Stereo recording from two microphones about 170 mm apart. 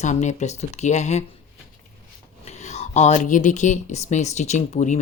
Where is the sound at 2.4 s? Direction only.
40° left (ahead or behind).